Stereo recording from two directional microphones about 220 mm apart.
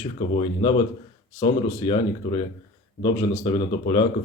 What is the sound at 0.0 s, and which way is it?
A man's voice, 25° left (ahead or behind).